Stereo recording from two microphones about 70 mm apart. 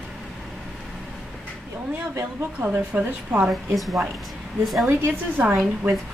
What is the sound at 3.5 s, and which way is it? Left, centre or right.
Speech, centre.